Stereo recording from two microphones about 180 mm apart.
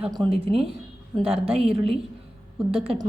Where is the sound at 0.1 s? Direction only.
25° right (ahead or behind).